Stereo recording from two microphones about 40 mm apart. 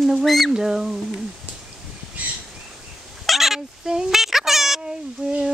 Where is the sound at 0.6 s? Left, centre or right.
Centre.